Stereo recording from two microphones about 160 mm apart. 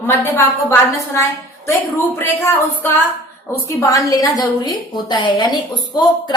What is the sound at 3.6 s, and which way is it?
A woman's voice, 20° left (ahead or behind).